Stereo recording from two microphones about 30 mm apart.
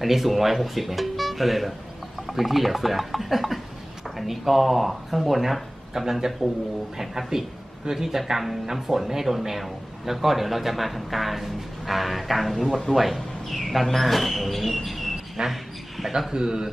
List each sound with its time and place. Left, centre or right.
0.0 s speech: centre
15.4 s a sound: centre
16.1 s a man's voice: centre